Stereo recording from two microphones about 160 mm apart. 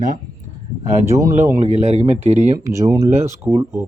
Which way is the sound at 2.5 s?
20° right (ahead or behind).